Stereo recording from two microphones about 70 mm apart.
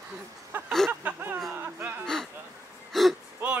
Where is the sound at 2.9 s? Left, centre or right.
Centre.